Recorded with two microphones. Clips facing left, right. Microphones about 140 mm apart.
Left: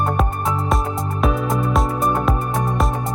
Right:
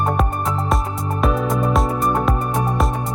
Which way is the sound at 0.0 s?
Centre (ahead or behind).